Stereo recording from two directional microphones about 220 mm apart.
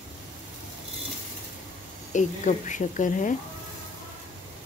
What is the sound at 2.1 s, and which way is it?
A woman's voice, 35° left (ahead or behind).